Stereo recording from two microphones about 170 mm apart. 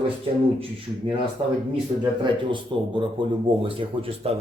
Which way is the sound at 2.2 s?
30° right (ahead or behind).